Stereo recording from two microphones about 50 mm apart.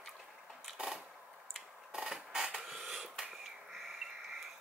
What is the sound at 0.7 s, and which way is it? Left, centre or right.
Sewing machine, centre.